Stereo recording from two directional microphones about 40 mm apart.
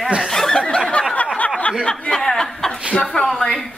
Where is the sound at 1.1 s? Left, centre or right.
Left.